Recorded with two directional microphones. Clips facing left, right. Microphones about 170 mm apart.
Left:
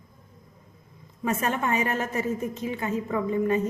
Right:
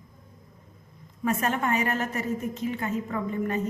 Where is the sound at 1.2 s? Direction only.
20° left (ahead or behind).